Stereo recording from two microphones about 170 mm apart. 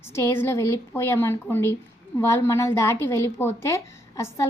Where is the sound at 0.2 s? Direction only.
15° left (ahead or behind).